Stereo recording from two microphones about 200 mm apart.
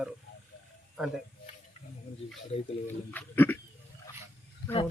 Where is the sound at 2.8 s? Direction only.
10° left (ahead or behind).